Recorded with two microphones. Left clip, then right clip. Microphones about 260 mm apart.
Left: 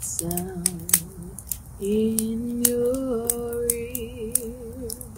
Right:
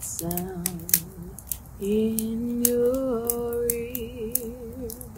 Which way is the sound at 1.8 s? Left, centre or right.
Centre.